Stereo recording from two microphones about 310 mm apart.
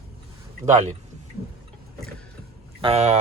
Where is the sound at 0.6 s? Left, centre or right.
Right.